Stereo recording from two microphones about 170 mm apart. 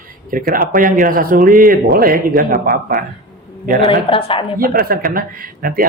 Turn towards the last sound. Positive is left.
turn(degrees=-55)  # may be behind; listen again after turning